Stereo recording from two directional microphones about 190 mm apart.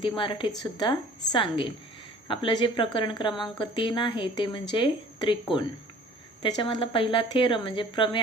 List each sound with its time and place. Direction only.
0.0 s speech: 25° left (ahead or behind)